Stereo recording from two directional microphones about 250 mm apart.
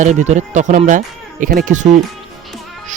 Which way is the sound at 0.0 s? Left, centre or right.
Right.